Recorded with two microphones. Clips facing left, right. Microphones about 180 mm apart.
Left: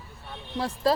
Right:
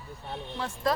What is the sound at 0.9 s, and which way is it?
Speech, 30° left (ahead or behind).